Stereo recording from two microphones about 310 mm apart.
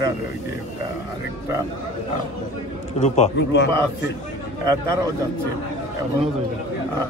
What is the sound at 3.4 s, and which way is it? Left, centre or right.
Speech, left.